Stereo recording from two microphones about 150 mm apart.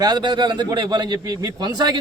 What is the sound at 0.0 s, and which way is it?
A man's voice, 30° right (ahead or behind).